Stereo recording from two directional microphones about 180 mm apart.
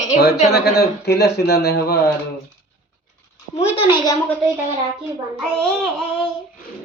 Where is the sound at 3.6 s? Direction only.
35° left (ahead or behind).